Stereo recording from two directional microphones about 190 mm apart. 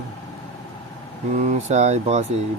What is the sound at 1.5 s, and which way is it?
Speech, 35° right (ahead or behind).